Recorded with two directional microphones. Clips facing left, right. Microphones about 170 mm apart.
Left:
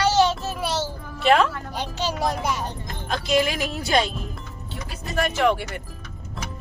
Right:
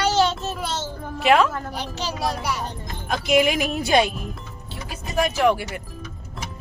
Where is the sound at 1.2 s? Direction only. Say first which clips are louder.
Right 1 dB; 10° right (ahead or behind).